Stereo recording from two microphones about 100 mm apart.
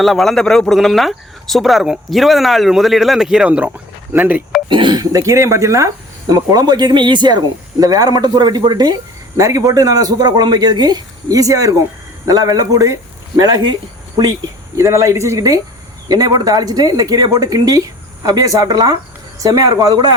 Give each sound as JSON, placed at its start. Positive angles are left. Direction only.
{"t": 0.0, "sound": "speech", "side_deg": 5}
{"t": 4.7, "sound": "speech", "side_deg": -55}
{"t": 4.9, "sound": "a man's voice", "side_deg": -35}
{"t": 13.4, "sound": "speech", "side_deg": -45}
{"t": 14.8, "sound": "speech", "side_deg": -30}